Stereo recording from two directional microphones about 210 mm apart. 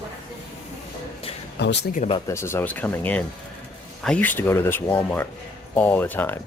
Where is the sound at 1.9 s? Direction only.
35° left (ahead or behind).